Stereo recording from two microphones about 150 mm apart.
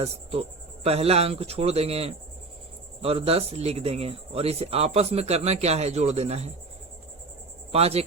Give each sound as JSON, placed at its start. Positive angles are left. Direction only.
{"t": 0.0, "sound": "speech", "side_deg": -45}
{"t": 7.7, "sound": "speech", "side_deg": -45}